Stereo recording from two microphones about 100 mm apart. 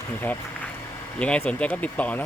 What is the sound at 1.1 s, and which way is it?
Speech, 15° left (ahead or behind).